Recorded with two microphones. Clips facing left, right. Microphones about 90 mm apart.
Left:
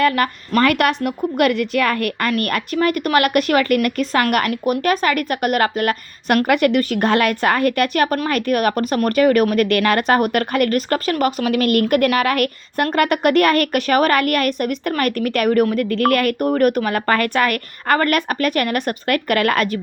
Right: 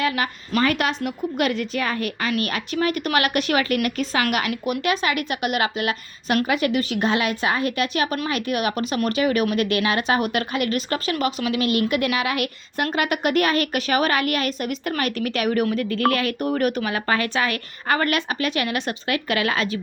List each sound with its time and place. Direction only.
0.0 s a woman's voice: 50° left (ahead or behind)
15.9 s a woman's voice: 60° left (ahead or behind)